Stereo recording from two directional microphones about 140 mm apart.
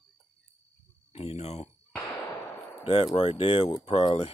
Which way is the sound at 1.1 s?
45° left (ahead or behind).